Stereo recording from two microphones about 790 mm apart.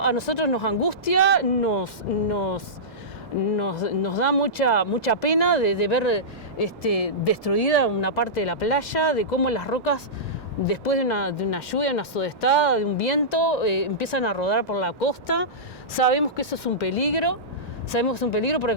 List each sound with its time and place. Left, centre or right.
0.0 s speech: left
15.9 s speech: left